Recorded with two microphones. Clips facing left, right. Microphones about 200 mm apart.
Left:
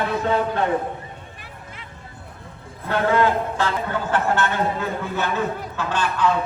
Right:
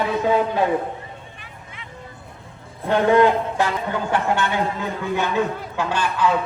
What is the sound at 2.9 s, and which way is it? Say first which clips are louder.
A man's voice: right 4 dB; 15° right (ahead or behind).